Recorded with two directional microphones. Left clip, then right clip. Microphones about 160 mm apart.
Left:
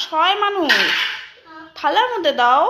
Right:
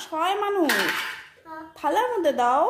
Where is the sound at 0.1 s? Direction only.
10° right (ahead or behind).